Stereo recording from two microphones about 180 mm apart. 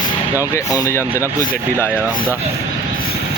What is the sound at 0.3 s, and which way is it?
Speech, 20° left (ahead or behind).